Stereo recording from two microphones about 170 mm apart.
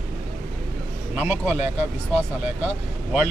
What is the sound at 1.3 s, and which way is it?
Speech, 40° left (ahead or behind).